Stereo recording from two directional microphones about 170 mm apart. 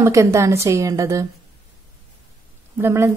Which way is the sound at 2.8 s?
15° right (ahead or behind).